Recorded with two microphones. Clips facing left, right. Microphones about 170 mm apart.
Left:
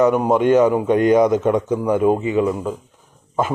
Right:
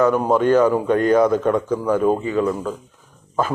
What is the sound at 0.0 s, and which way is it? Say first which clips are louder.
A man's voice: left 1 dB; 15° left (ahead or behind).